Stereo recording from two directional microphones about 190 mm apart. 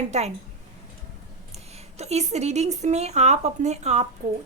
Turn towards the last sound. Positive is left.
turn(degrees=-50)  # may be behind; listen again after turning